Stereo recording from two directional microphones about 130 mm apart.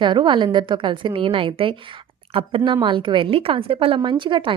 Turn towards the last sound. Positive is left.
turn(degrees=-40)  # may be behind; listen again after turning